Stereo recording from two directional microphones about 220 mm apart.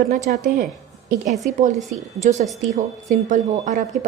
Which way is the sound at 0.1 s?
40° right (ahead or behind).